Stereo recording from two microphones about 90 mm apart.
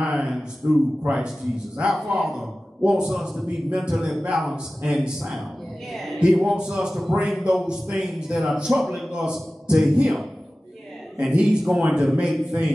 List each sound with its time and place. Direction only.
0.1 s a sound: 5° right (ahead or behind)
0.6 s a man's voice: 25° right (ahead or behind)
1.0 s a man's voice: 15° right (ahead or behind)